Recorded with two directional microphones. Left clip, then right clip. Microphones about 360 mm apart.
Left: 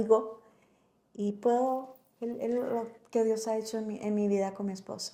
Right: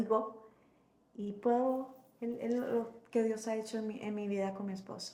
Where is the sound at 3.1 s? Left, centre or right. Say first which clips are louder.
Left 5 dB; left.